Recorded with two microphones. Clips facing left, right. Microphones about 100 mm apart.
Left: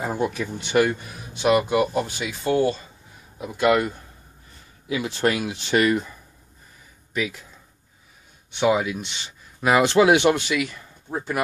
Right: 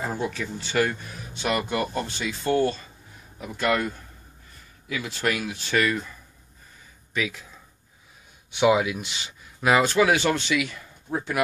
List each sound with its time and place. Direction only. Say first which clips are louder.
0.0 s speech: left 4 dB; 15° left (ahead or behind)
4.9 s speech: left 4 dB; 20° left (ahead or behind)
7.2 s speech: left 2 dB; 5° left (ahead or behind)
8.5 s speech: even; 5° right (ahead or behind)
9.8 s speech: left 4 dB; 25° left (ahead or behind)
10.5 s speech: left 1 dB; centre (ahead or behind)